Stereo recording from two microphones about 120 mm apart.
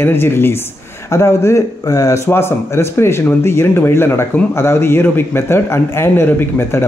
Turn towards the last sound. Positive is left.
turn(degrees=20)  # may be behind; listen again after turning